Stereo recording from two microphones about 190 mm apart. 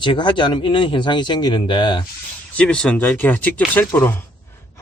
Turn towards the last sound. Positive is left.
turn(degrees=10)  # may be behind; listen again after turning